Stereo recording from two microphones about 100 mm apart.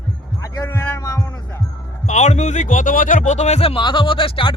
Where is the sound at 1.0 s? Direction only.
30° left (ahead or behind).